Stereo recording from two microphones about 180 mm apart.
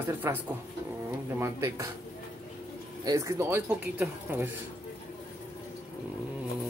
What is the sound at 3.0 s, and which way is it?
Speech, 15° right (ahead or behind).